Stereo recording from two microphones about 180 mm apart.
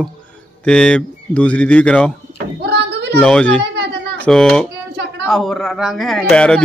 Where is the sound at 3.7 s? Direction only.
65° right (ahead or behind).